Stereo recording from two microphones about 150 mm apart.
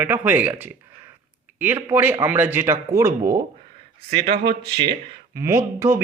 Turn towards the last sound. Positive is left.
turn(degrees=-15)  # may be behind; listen again after turning